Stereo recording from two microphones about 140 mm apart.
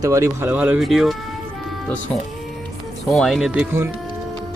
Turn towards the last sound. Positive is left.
turn(degrees=0)  # may be behind; listen again after turning